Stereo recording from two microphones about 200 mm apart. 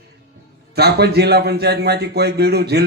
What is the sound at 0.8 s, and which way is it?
A man's voice, 55° right (ahead or behind).